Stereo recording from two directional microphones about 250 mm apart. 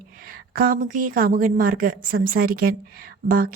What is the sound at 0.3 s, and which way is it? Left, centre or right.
A woman's voice, right.